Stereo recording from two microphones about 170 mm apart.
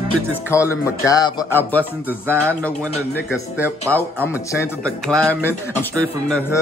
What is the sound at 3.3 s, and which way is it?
Speech, 10° right (ahead or behind).